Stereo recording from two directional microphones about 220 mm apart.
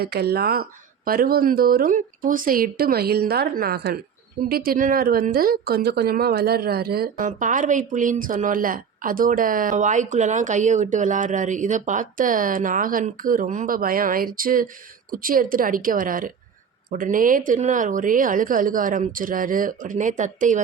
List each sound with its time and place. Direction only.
0.0 s speech: 45° right (ahead or behind)